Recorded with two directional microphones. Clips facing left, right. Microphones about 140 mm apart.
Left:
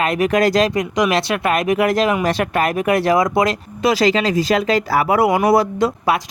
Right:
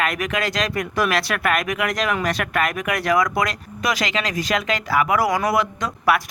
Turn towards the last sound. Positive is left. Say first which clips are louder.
# left 3 dB
turn(degrees=25)  # may be behind; listen again after turning